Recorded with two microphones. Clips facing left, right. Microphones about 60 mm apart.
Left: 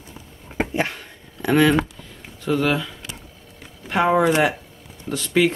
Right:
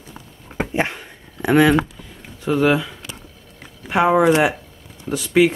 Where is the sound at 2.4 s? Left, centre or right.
Centre.